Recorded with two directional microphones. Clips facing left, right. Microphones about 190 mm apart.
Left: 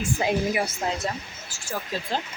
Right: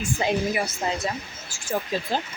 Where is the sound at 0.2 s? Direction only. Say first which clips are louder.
Even; 5° left (ahead or behind).